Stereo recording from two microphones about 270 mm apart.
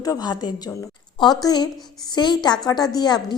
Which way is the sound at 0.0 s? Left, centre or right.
Centre.